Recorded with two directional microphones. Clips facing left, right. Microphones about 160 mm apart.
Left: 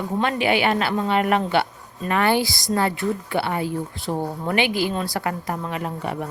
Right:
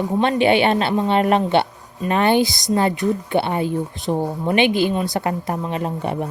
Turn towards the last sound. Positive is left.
turn(degrees=-25)  # may be behind; listen again after turning